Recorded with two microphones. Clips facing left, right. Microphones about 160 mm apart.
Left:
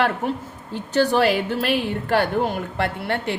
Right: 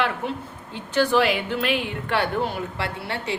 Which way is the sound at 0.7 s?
40° left (ahead or behind).